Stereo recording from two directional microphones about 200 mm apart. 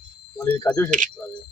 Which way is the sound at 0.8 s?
40° right (ahead or behind).